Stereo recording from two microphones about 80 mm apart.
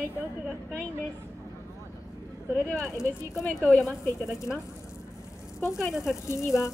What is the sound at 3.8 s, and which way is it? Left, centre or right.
Speech, centre.